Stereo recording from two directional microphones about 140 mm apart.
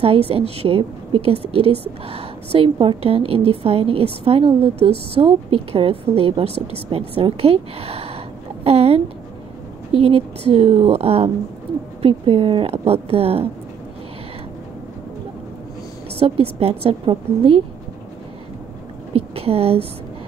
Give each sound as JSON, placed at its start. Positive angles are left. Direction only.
{"t": 0.0, "sound": "a woman's voice", "side_deg": -45}
{"t": 16.2, "sound": "a woman's voice", "side_deg": -45}
{"t": 19.1, "sound": "a woman's voice", "side_deg": -45}